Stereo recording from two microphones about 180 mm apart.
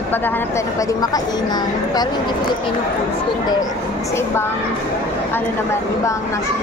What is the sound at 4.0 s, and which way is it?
Speech, 15° left (ahead or behind).